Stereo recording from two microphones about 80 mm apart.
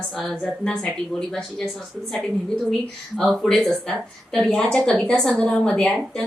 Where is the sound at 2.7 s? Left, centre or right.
Centre.